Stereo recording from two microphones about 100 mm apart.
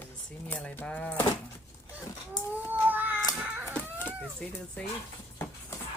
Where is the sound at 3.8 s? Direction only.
15° left (ahead or behind).